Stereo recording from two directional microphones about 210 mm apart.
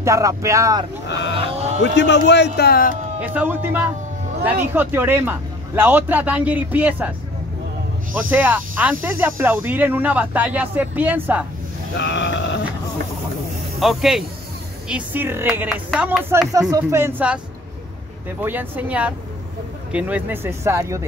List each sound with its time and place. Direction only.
0.0 s a man's voice: 15° right (ahead or behind)
1.3 s livestock: 30° right (ahead or behind)
1.8 s speech: 55° left (ahead or behind)
3.2 s a man's voice: 10° right (ahead or behind)
8.2 s a man's voice: 10° right (ahead or behind)
11.9 s a sound: 55° left (ahead or behind)
13.7 s a man's voice: centre (ahead or behind)
18.4 s a man's voice: 10° right (ahead or behind)